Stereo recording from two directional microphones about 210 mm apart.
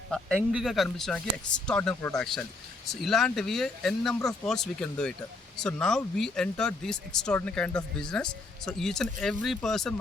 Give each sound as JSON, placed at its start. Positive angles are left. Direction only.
{"t": 0.3, "sound": "speech", "side_deg": -5}